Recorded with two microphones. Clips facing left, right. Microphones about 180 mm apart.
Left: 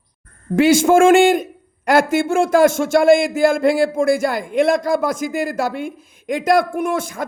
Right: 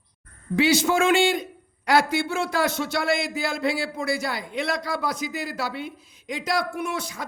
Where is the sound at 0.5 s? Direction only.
50° left (ahead or behind).